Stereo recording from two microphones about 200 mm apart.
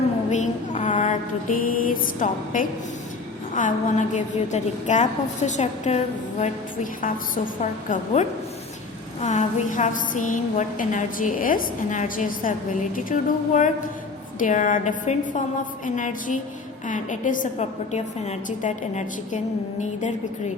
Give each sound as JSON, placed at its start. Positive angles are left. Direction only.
{"t": 0.3, "sound": "mantra", "side_deg": 35}
{"t": 3.5, "sound": "a woman's voice", "side_deg": 40}
{"t": 7.6, "sound": "a woman's voice", "side_deg": 35}